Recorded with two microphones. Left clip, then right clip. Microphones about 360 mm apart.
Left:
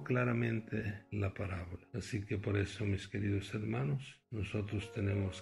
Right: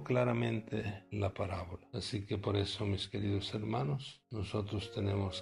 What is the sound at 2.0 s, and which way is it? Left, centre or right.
Speech, centre.